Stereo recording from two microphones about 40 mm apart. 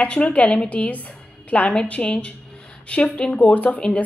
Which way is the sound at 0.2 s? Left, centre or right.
Left.